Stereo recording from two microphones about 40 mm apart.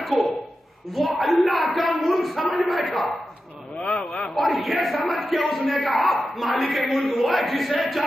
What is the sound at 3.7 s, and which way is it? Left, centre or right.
Speech, left.